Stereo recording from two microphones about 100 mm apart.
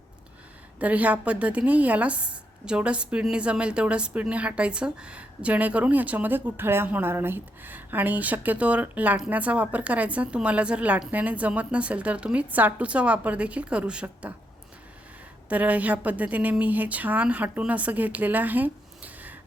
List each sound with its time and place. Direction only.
0.8 s a woman's voice: 15° right (ahead or behind)
15.4 s a woman's voice: 15° right (ahead or behind)